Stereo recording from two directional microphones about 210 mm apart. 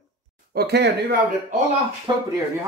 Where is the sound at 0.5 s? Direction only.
50° right (ahead or behind).